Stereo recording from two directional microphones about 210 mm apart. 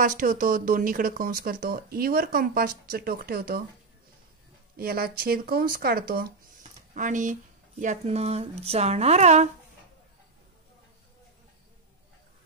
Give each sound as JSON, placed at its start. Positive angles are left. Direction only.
{"t": 0.0, "sound": "speech", "side_deg": -40}
{"t": 4.7, "sound": "speech", "side_deg": -45}